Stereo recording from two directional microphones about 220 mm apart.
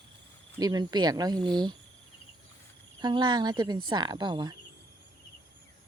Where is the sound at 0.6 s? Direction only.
20° right (ahead or behind).